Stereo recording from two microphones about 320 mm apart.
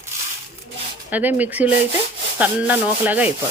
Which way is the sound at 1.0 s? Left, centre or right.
Centre.